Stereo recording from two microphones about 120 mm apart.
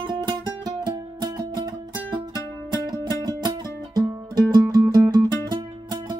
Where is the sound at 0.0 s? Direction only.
40° right (ahead or behind).